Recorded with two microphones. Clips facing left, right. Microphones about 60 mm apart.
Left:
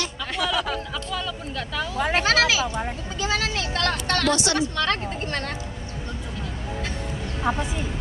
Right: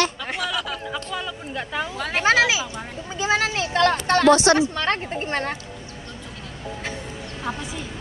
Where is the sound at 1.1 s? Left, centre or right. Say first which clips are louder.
Even; right.